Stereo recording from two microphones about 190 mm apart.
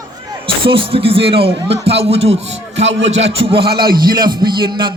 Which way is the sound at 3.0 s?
35° right (ahead or behind).